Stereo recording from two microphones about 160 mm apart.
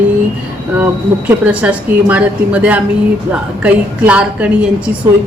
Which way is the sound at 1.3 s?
10° right (ahead or behind).